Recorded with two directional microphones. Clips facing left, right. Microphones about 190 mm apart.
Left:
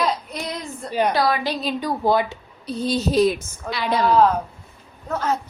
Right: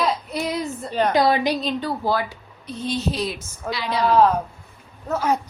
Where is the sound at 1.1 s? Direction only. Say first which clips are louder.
Right 3 dB; 20° right (ahead or behind).